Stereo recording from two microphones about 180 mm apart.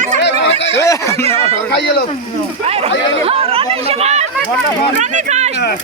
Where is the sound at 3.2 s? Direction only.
35° right (ahead or behind).